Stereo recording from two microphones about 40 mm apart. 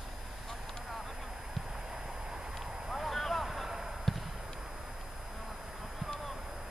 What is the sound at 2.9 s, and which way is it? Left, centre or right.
Vehicle, centre.